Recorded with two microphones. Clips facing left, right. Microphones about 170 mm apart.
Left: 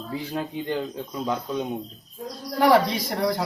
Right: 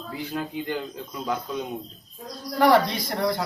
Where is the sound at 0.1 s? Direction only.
30° left (ahead or behind).